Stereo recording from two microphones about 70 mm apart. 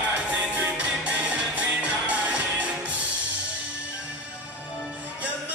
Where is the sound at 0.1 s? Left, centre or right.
Centre.